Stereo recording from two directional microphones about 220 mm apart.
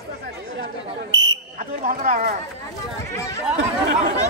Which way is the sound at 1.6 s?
35° right (ahead or behind).